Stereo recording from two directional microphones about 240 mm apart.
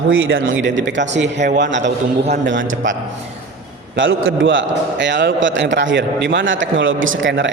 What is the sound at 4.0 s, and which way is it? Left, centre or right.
A man's voice, right.